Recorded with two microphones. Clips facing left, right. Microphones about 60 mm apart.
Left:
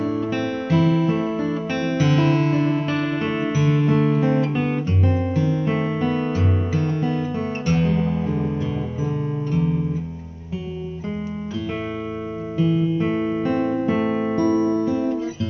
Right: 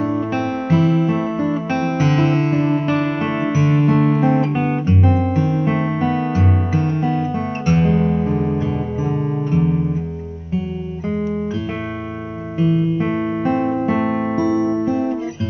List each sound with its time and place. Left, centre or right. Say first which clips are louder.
0.0 s music: right 3 dB; right
12.5 s music: right 3 dB; right